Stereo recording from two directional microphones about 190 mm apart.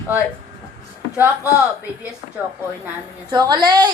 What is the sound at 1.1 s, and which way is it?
Speech, 10° right (ahead or behind).